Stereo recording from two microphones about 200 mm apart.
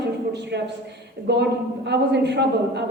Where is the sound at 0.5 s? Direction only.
60° right (ahead or behind).